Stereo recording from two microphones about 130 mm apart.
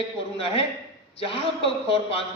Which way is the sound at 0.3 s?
45° left (ahead or behind).